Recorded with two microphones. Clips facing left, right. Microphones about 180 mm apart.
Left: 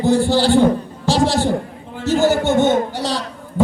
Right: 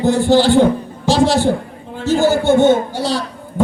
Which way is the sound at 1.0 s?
15° right (ahead or behind).